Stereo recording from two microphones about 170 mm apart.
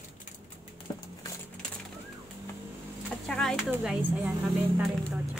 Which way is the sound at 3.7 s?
5° right (ahead or behind).